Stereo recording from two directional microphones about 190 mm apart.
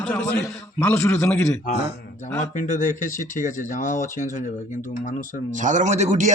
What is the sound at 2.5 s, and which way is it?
Speech, 40° left (ahead or behind).